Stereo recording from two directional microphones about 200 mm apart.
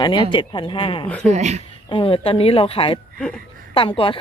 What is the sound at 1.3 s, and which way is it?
Speech, 35° right (ahead or behind).